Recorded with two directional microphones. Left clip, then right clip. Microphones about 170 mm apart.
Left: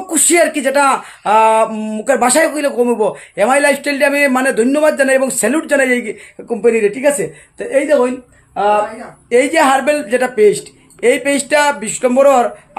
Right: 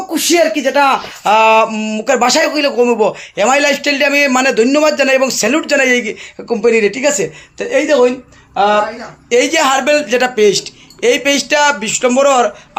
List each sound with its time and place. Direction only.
0.1 s speech: 10° left (ahead or behind)
1.2 s speech: 10° right (ahead or behind)